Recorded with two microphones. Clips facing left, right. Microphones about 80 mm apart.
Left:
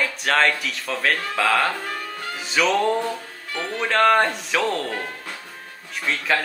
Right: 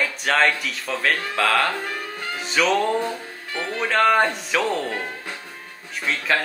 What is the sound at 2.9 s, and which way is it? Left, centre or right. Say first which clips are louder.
Music: right 1 dB; centre.